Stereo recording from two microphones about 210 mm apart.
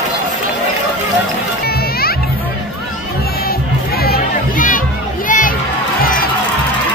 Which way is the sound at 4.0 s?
45° left (ahead or behind).